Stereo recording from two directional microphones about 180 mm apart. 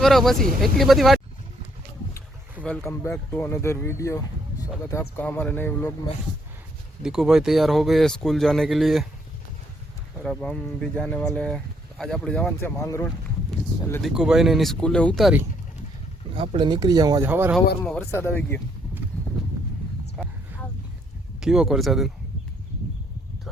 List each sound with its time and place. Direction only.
0.0 s speech: centre (ahead or behind)
2.8 s speech: 15° left (ahead or behind)
7.0 s speech: 5° right (ahead or behind)
10.2 s speech: 5° left (ahead or behind)
14.0 s speech: 5° right (ahead or behind)
16.3 s speech: 30° right (ahead or behind); by 17.5 s 10° right (ahead or behind)
17.7 s speech: 5° left (ahead or behind)
20.2 s a sound: centre (ahead or behind)
21.4 s speech: 5° right (ahead or behind)